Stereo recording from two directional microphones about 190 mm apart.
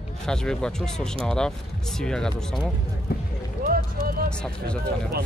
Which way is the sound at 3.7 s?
50° right (ahead or behind).